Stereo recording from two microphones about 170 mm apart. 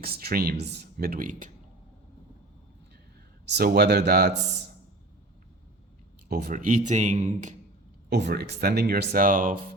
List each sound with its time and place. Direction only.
0.0 s speech: 65° right (ahead or behind)
3.4 s speech: 75° right (ahead or behind)
6.2 s speech: 65° right (ahead or behind); by 7.5 s 45° right (ahead or behind)
8.1 s speech: 75° right (ahead or behind); by 9.6 s 50° right (ahead or behind)